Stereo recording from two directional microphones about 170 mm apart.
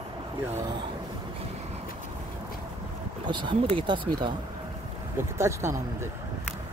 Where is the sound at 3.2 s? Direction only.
25° right (ahead or behind).